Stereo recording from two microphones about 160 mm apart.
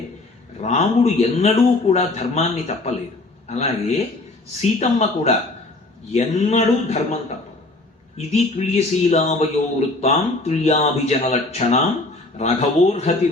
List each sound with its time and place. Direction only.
0.6 s a man's voice: 45° left (ahead or behind)
8.3 s a man's voice: 40° left (ahead or behind)